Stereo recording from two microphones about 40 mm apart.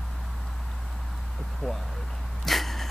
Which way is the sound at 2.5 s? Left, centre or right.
Centre.